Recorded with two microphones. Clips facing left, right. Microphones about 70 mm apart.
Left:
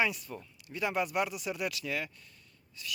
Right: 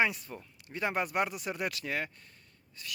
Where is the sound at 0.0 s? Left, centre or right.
Right.